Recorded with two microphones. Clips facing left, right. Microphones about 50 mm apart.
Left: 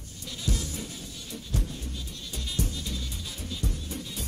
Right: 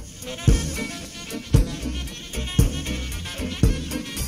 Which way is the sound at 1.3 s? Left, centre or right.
Right.